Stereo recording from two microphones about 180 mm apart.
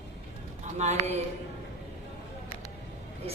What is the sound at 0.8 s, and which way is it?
Speech, 35° right (ahead or behind).